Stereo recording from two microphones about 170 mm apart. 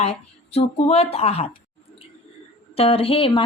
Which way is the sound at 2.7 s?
35° left (ahead or behind).